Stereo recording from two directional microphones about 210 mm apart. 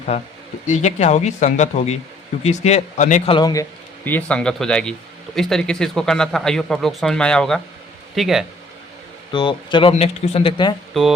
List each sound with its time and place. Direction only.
0.7 s speech: 35° left (ahead or behind)
3.3 s speech: 15° left (ahead or behind); by 8.4 s centre (ahead or behind)
9.3 s speech: 20° left (ahead or behind)